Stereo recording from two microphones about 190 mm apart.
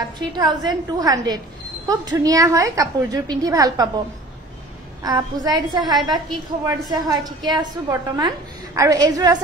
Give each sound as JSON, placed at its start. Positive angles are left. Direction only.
{"t": 0.4, "sound": "a woman's voice", "side_deg": -20}
{"t": 5.0, "sound": "a woman's voice", "side_deg": -20}